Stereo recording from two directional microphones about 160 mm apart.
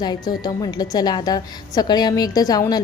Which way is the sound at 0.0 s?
25° left (ahead or behind).